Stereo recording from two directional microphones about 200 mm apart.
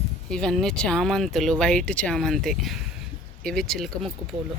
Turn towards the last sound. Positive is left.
turn(degrees=0)  # may be behind; listen again after turning